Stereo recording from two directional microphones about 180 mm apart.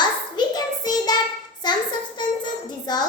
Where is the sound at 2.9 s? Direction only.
20° left (ahead or behind).